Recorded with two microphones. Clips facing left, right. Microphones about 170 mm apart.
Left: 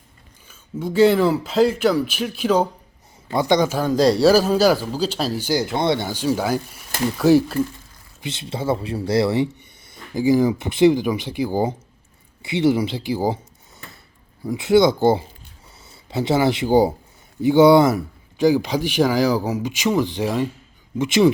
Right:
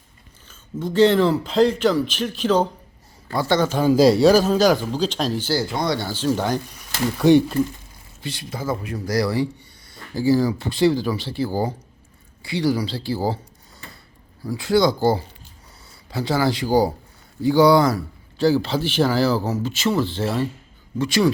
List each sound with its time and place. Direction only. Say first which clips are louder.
0.4 s speech: left 1 dB; 10° left (ahead or behind)
3.8 s speech: right 2 dB; 5° right (ahead or behind); by 5.6 s 15° left (ahead or behind)
5.7 s speech: left 3 dB; 25° left (ahead or behind); by 7.6 s 5° left (ahead or behind)
8.2 s speech: left 3 dB; 25° left (ahead or behind)
14.4 s speech: left 3 dB; 20° left (ahead or behind)